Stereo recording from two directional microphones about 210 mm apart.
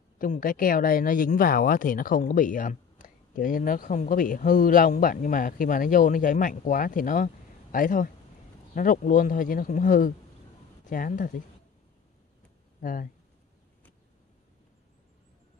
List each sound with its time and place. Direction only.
0.2 s speech: 40° left (ahead or behind)
12.8 s speech: 40° left (ahead or behind)